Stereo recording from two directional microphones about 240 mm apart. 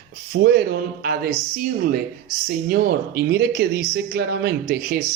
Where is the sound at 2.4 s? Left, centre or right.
Right.